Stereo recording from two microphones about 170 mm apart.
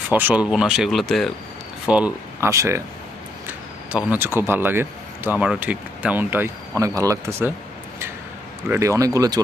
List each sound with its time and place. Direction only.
0.1 s speech: 10° right (ahead or behind)
3.9 s speech: 10° right (ahead or behind)
8.6 s speech: 15° right (ahead or behind)